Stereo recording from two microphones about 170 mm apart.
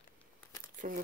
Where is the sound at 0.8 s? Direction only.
55° right (ahead or behind).